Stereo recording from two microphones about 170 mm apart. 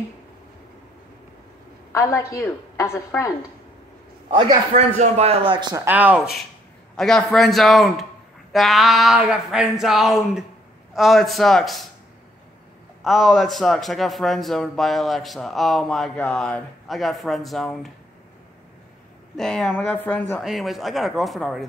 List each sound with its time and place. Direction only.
1.9 s a woman's voice: 20° left (ahead or behind)
4.3 s a man's voice: 30° right (ahead or behind)
4.9 s a man's voice: 40° right (ahead or behind)
5.9 s a man's voice: 10° right (ahead or behind)
13.0 s a man's voice: centre (ahead or behind)
19.3 s a man's voice: 5° left (ahead or behind)